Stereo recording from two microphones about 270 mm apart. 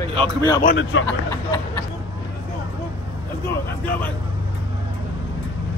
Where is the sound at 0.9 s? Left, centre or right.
Left.